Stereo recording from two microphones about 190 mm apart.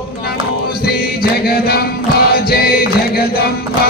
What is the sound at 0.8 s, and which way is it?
Music, 55° left (ahead or behind).